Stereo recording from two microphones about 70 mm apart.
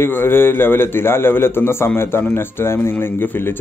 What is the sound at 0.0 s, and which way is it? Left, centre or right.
Speech, left.